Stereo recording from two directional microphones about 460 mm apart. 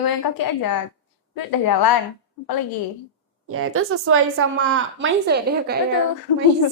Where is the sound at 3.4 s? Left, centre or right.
Right.